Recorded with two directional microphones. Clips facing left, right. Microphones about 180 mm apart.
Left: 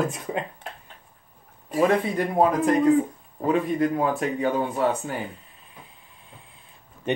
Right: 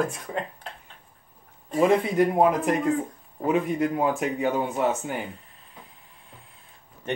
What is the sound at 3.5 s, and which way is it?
Speech, 15° right (ahead or behind).